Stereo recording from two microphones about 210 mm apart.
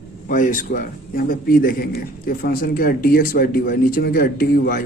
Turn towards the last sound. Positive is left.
turn(degrees=45)  # may be behind; listen again after turning